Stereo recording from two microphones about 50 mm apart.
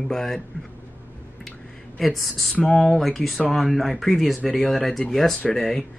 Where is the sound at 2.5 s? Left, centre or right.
Centre.